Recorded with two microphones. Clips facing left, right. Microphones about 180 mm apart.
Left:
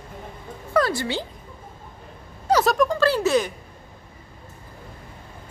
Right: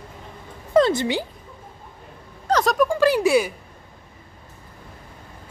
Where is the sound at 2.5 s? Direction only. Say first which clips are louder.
Left 1 dB; 10° left (ahead or behind).